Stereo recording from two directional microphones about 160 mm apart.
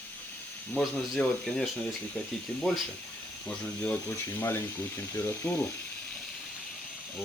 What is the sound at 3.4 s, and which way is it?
Speech, 10° left (ahead or behind).